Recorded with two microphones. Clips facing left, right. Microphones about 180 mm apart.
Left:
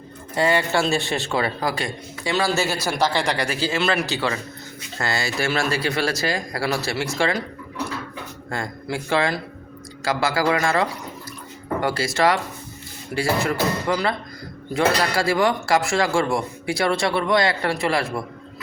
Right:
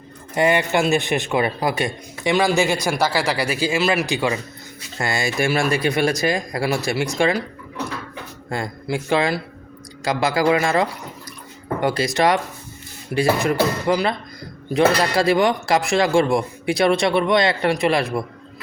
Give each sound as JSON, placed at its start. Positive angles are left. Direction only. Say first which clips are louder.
{"t": 0.3, "sound": "a man's voice", "louder": "right 2 dB", "side_deg": -20}
{"t": 8.4, "sound": "speech", "louder": "right 3 dB", "side_deg": -20}